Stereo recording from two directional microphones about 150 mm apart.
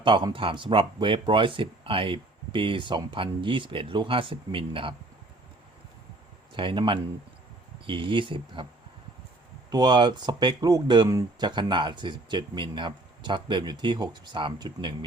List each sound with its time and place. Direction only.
0.0 s speech: 30° right (ahead or behind)
6.5 s speech: 35° right (ahead or behind)
9.6 s speech: 30° right (ahead or behind)